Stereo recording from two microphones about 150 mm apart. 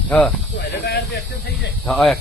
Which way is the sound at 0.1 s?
10° left (ahead or behind).